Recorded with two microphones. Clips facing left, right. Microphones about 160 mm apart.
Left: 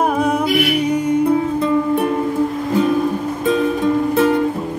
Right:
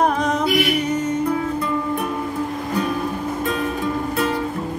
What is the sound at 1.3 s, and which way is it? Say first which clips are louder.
Music: left 6 dB; 25° left (ahead or behind).